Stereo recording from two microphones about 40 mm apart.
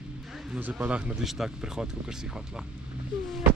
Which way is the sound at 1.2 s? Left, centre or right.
Centre.